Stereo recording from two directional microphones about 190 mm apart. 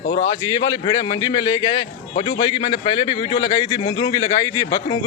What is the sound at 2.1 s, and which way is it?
Speech, 40° left (ahead or behind).